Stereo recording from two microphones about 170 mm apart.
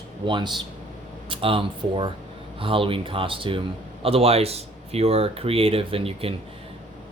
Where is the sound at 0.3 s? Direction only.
30° right (ahead or behind).